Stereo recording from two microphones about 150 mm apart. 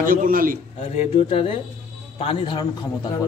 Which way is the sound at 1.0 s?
40° left (ahead or behind).